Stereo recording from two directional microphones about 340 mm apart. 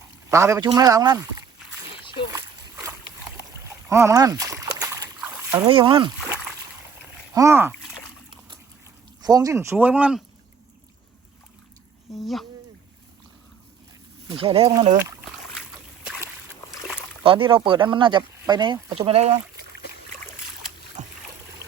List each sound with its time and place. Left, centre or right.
0.3 s speech: centre
1.9 s a sound: centre
2.3 s splash: centre
9.2 s speech: centre
12.1 s speech: centre
14.3 s speech: centre
16.0 s boat: centre
17.2 s speech: centre
21.0 s boat: right